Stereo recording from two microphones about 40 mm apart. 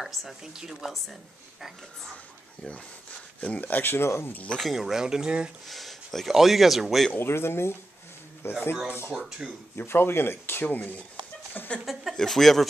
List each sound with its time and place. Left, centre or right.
0.0 s speech: centre
0.4 s speech: centre
3.3 s speech: left
3.8 s speech: left
4.6 s speech: centre
5.7 s speech: centre
7.2 s speech: left
8.4 s speech: left
9.1 s speech: centre
9.8 s speech: left
11.8 s speech: centre
12.2 s speech: centre